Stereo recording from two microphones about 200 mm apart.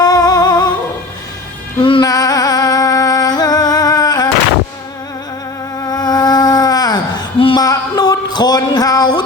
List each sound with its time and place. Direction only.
0.0 s music: 20° left (ahead or behind)
1.8 s music: 25° left (ahead or behind)
5.8 s insect: 20° left (ahead or behind)